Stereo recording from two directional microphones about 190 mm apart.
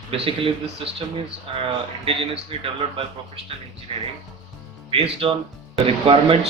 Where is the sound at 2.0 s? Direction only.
30° right (ahead or behind).